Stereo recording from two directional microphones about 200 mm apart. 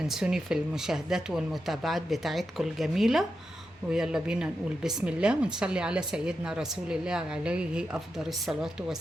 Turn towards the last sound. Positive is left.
turn(degrees=-5)  # may be behind; listen again after turning